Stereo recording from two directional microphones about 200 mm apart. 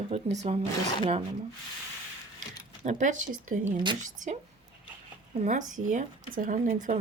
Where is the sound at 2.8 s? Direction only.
40° right (ahead or behind).